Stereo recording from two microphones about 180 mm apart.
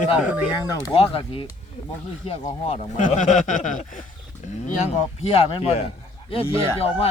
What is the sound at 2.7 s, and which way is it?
Speech, 40° left (ahead or behind).